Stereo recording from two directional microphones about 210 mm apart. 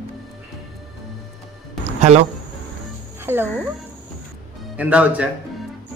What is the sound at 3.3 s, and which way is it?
Speech, 10° right (ahead or behind).